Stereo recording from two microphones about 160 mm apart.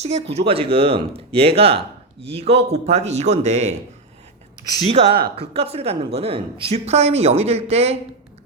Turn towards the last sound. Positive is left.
turn(degrees=-40)  # may be behind; listen again after turning